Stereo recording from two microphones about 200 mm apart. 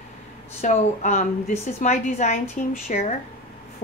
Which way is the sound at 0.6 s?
40° left (ahead or behind).